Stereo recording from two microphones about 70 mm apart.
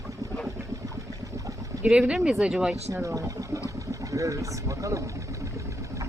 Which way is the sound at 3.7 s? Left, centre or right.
Right.